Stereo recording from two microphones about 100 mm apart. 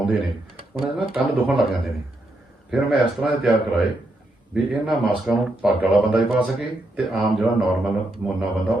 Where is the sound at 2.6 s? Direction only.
5° right (ahead or behind).